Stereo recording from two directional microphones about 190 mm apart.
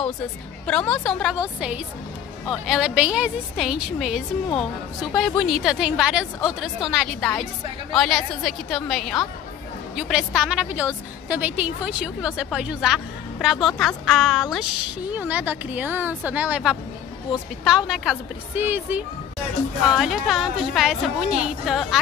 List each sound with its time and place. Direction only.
0.7 s a woman's voice: 5° left (ahead or behind)
1.3 s a woman's voice: 5° right (ahead or behind)